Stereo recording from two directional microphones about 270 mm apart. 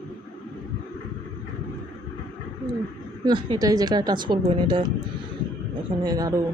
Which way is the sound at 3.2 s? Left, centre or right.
Centre.